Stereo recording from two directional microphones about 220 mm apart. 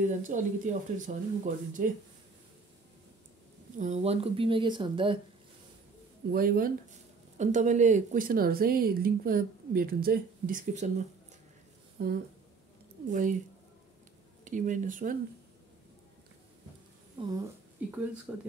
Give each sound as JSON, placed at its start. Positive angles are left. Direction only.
{"t": 0.0, "sound": "speech", "side_deg": -35}
{"t": 3.7, "sound": "speech", "side_deg": -35}
{"t": 6.3, "sound": "speech", "side_deg": -40}
{"t": 12.0, "sound": "speech", "side_deg": -40}
{"t": 14.4, "sound": "speech", "side_deg": -35}
{"t": 18.3, "sound": "speech", "side_deg": -5}